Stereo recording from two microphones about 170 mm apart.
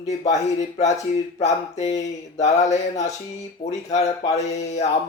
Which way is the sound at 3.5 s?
40° left (ahead or behind).